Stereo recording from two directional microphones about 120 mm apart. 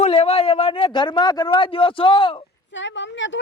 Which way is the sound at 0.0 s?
55° left (ahead or behind).